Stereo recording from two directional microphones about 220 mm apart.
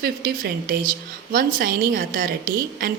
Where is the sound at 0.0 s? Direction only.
45° right (ahead or behind).